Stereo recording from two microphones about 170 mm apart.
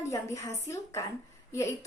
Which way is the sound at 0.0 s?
20° left (ahead or behind).